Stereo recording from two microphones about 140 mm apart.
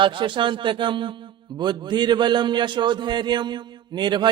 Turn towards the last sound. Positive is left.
turn(degrees=-30)  # may be behind; listen again after turning